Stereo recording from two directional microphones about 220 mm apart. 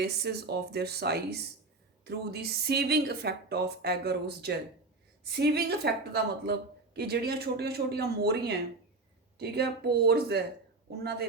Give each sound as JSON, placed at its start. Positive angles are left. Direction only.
{"t": 0.0, "sound": "speech", "side_deg": -50}